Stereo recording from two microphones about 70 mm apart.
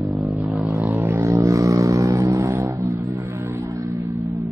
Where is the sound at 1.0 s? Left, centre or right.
Right.